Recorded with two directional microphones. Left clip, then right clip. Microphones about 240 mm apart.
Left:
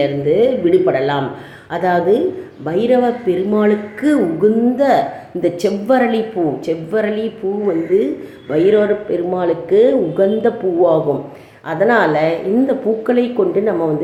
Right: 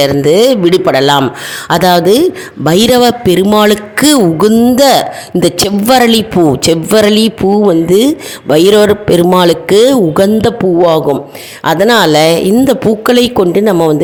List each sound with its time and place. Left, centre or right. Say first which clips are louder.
0.0 s a man's voice: right 7 dB; right